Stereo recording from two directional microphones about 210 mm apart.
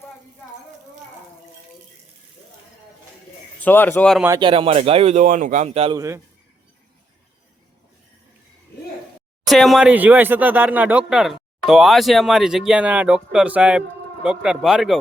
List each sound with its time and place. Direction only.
3.6 s a man's voice: 10° left (ahead or behind)
4.2 s speech: 15° right (ahead or behind)
6.0 s a man's voice: 15° right (ahead or behind)
9.5 s speech: centre (ahead or behind)